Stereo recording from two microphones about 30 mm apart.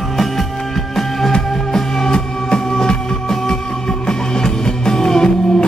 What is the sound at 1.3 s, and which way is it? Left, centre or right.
Music, left.